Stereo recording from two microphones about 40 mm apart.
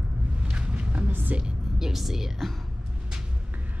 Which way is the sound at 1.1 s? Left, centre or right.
Right.